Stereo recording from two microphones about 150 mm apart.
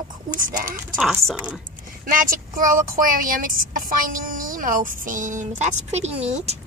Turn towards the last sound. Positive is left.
turn(degrees=-45)  # may be behind; listen again after turning